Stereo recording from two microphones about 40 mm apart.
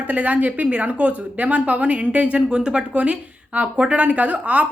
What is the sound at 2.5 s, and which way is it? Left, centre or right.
A woman's voice, right.